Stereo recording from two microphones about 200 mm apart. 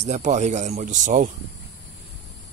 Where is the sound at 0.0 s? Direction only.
35° right (ahead or behind).